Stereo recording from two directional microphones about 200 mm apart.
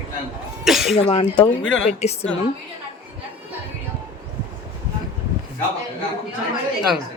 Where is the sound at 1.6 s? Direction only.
65° left (ahead or behind).